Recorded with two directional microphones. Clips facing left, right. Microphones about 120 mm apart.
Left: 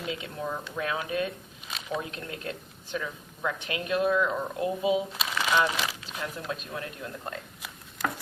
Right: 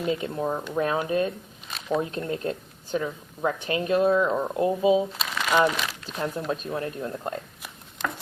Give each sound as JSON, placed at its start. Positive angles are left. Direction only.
{"t": 0.0, "sound": "speech", "side_deg": -40}
{"t": 5.1, "sound": "crumpling", "side_deg": 5}
{"t": 6.1, "sound": "speech", "side_deg": -40}